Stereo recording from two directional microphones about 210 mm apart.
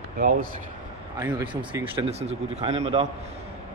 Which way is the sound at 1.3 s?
25° right (ahead or behind).